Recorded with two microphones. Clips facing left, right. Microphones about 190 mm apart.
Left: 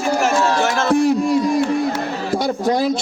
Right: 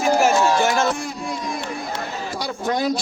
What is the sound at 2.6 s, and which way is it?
Speech, 30° left (ahead or behind).